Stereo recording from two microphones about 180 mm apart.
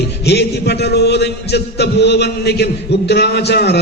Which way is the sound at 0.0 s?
65° left (ahead or behind).